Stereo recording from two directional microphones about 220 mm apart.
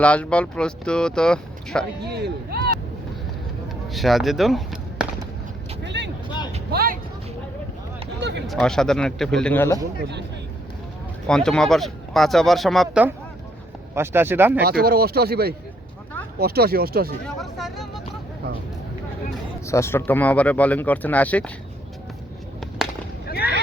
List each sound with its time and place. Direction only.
0.0 s speech: 5° left (ahead or behind)
2.0 s speech: 50° right (ahead or behind)
3.8 s speech: centre (ahead or behind)
5.8 s vehicle: 55° right (ahead or behind)
6.7 s vehicle: 40° right (ahead or behind)
8.2 s a sound: 50° right (ahead or behind)
8.4 s speech: centre (ahead or behind)
11.3 s speech: 5° left (ahead or behind)
14.6 s speech: 45° right (ahead or behind)
17.2 s vehicle: centre (ahead or behind)
19.6 s speech: 15° left (ahead or behind)
22.8 s a sound: centre (ahead or behind)
23.2 s boat: 45° left (ahead or behind)